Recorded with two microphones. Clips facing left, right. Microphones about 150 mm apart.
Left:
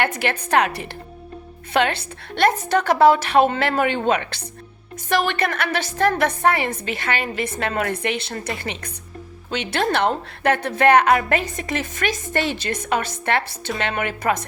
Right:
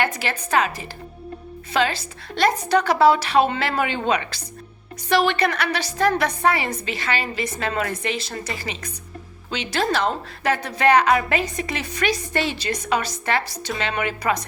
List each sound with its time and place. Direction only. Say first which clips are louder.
0.0 s a woman's voice: left 2 dB; 55° left (ahead or behind)